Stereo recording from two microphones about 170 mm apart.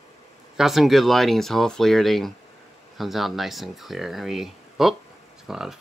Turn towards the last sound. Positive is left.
turn(degrees=0)  # may be behind; listen again after turning